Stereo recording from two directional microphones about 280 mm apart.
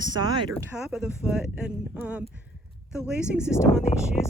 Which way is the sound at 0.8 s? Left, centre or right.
Centre.